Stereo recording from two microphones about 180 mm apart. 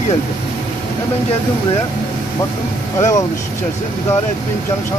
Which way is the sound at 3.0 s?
20° left (ahead or behind).